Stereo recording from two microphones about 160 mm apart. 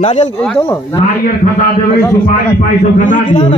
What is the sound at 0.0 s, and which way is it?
Speech, 40° left (ahead or behind).